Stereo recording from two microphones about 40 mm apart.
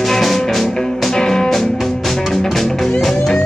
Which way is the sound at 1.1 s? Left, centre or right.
Centre.